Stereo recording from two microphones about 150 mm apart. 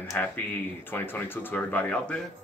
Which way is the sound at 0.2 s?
10° left (ahead or behind).